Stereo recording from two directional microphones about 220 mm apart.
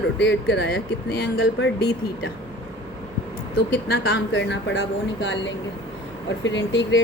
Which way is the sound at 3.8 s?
50° left (ahead or behind).